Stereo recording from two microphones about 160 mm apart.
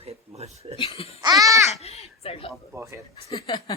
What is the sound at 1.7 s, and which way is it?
Speech, 40° left (ahead or behind).